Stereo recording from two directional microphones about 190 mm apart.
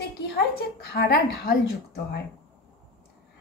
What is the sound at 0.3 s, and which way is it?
A woman's voice, 60° left (ahead or behind).